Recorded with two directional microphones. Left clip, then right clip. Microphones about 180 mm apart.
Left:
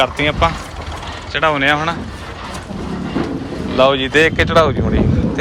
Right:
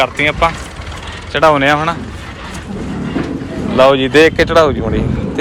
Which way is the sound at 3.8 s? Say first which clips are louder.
Right 4 dB; 5° left (ahead or behind).